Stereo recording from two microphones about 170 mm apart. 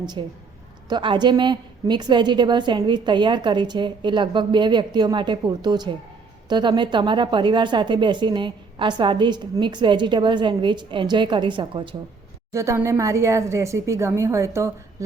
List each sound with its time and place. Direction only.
0.2 s a woman's voice: 30° right (ahead or behind)
12.5 s a woman's voice: 15° right (ahead or behind)